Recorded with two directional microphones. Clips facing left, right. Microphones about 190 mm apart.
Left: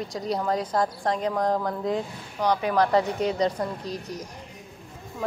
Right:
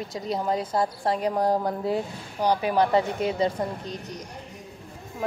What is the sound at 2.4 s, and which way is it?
Speech, 30° right (ahead or behind).